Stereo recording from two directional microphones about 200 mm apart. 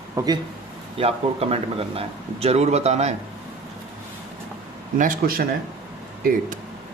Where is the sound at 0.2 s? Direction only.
15° right (ahead or behind).